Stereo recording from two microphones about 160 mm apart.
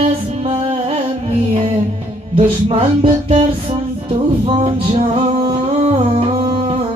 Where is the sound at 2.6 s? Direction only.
35° right (ahead or behind).